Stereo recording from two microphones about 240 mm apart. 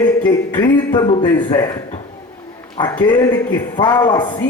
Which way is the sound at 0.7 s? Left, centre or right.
Centre.